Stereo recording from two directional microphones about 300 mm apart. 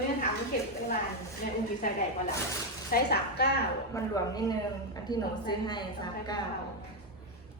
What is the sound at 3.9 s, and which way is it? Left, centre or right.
Speech, centre.